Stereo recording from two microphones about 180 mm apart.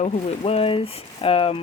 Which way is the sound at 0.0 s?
35° left (ahead or behind).